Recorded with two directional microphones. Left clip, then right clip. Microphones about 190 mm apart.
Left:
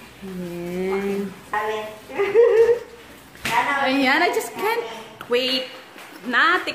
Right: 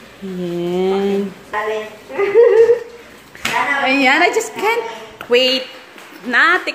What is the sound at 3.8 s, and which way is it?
A woman's voice, 15° right (ahead or behind).